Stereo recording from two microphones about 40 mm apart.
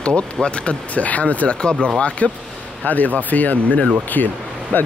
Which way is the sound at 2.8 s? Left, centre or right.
Left.